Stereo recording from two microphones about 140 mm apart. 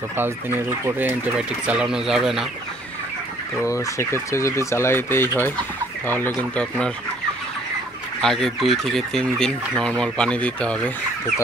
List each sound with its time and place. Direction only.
0.2 s speech: 15° right (ahead or behind)
3.6 s speech: 20° left (ahead or behind)
8.2 s speech: 5° left (ahead or behind)